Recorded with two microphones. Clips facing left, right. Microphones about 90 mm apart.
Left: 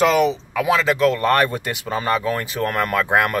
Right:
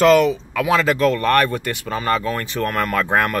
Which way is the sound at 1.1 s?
20° left (ahead or behind).